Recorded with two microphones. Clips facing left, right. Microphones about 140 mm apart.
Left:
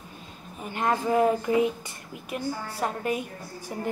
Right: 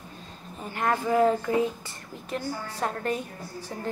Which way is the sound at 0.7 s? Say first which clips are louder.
Left 1 dB; 20° left (ahead or behind).